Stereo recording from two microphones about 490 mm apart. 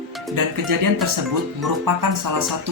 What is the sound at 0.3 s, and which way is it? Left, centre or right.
Speech, right.